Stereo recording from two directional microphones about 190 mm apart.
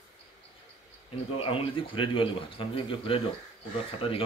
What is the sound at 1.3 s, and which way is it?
A man's voice, 30° left (ahead or behind).